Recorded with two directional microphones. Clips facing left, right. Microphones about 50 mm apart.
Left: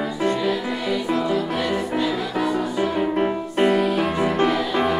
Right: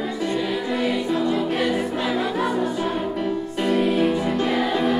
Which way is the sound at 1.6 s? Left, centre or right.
Right.